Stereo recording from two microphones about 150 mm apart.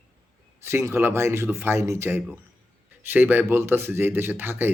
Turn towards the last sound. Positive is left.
turn(degrees=-15)  # may be behind; listen again after turning